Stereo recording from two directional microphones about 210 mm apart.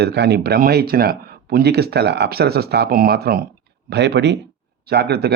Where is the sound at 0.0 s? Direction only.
50° right (ahead or behind).